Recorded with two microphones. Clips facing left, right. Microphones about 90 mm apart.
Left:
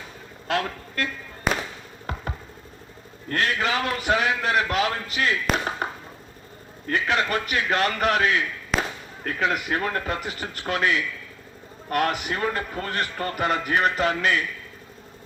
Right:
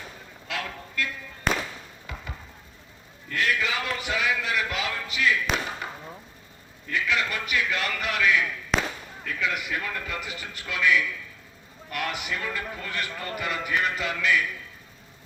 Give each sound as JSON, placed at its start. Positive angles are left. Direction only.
{"t": 0.4, "sound": "a man's voice", "side_deg": 45}
{"t": 1.5, "sound": "fireworks", "side_deg": 5}
{"t": 3.2, "sound": "a man's voice", "side_deg": 45}
{"t": 8.7, "sound": "a sound", "side_deg": 0}
{"t": 9.2, "sound": "a man's voice", "side_deg": 50}